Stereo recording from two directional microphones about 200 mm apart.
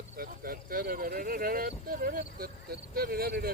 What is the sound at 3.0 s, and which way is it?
Speech, 50° right (ahead or behind).